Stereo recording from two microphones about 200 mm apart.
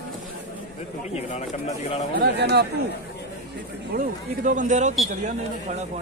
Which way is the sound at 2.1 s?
55° right (ahead or behind).